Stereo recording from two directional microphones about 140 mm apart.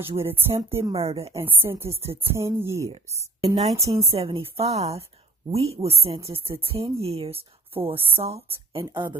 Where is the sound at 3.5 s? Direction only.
50° right (ahead or behind).